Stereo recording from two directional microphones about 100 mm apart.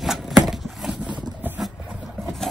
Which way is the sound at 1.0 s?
15° right (ahead or behind).